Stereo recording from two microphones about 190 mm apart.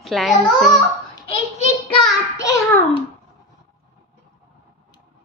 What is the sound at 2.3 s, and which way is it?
Speech, 15° left (ahead or behind).